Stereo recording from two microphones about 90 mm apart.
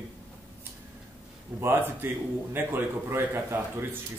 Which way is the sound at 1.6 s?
25° right (ahead or behind).